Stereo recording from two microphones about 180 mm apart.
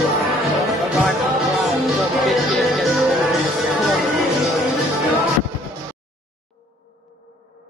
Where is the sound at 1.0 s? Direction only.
Centre (ahead or behind).